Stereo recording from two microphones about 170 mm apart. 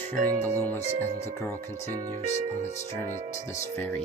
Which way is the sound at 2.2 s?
40° left (ahead or behind).